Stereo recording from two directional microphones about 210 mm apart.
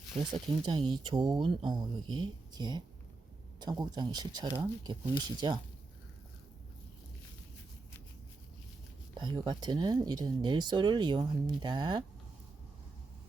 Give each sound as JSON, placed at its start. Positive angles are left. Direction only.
{"t": 0.1, "sound": "speech", "side_deg": -20}
{"t": 9.1, "sound": "speech", "side_deg": -20}